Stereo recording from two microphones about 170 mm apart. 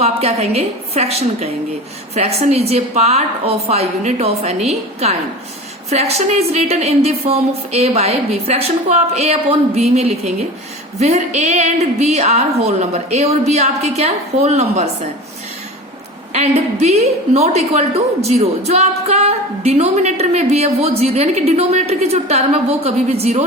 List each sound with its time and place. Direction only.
0.0 s a woman's voice: 35° right (ahead or behind)
11.0 s a woman's voice: 40° right (ahead or behind)
16.3 s a woman's voice: 40° right (ahead or behind)